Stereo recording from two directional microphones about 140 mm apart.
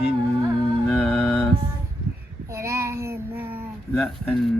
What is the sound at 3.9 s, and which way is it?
Music, 5° left (ahead or behind).